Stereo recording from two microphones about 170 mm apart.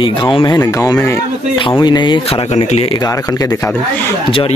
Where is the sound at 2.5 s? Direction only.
40° left (ahead or behind).